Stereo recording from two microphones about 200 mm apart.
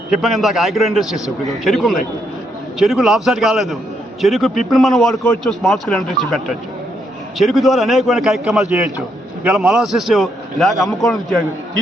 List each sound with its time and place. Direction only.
0.1 s a man's voice: centre (ahead or behind)